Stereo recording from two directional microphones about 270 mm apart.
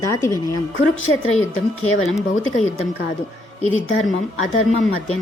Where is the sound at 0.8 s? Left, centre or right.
Left.